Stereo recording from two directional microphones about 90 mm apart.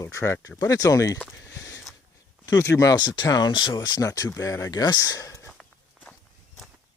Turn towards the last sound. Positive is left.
turn(degrees=40)  # may be behind; listen again after turning